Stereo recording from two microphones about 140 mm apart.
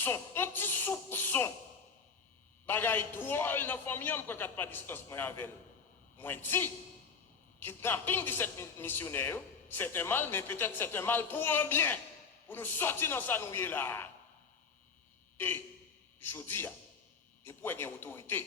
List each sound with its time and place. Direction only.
0.0 s a man's voice: 15° left (ahead or behind)
2.6 s a man's voice: 15° left (ahead or behind)
15.4 s a man's voice: 15° left (ahead or behind)